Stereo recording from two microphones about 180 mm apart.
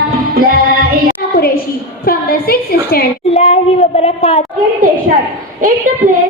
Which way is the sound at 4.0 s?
35° left (ahead or behind).